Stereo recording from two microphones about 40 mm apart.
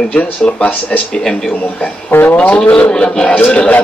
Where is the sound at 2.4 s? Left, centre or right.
Left.